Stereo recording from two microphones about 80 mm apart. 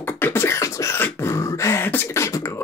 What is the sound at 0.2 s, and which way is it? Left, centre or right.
Beatboxing, left.